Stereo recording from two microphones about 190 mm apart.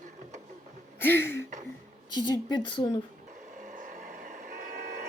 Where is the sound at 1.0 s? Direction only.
10° left (ahead or behind).